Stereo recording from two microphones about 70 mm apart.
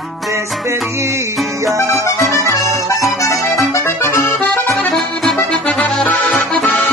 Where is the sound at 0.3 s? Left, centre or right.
Right.